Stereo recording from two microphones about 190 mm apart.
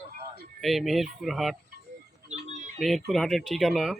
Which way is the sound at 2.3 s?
35° right (ahead or behind).